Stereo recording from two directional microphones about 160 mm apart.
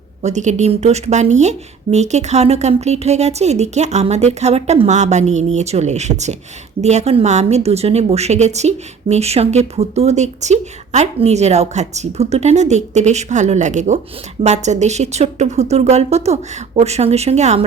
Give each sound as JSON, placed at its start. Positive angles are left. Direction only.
{"t": 0.2, "sound": "a woman's voice", "side_deg": -45}